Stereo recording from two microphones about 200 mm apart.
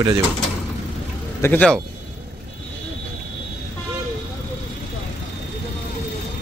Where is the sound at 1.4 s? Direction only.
10° left (ahead or behind).